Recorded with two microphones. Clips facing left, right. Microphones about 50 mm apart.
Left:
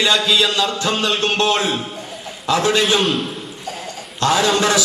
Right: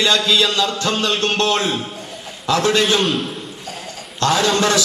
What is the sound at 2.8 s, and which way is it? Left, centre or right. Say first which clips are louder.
Speech: even; centre.